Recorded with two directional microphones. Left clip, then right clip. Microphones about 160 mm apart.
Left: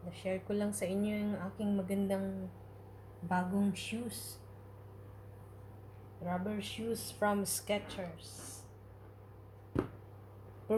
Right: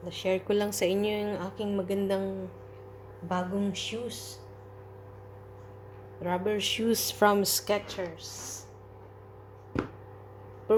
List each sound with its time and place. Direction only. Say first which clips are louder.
0.1 s a woman's voice: right 10 dB; 60° right (ahead or behind); by 2.2 s 40° right (ahead or behind)
3.2 s a sound: right 4 dB; 10° right (ahead or behind)
6.2 s a woman's voice: right 11 dB; 55° right (ahead or behind)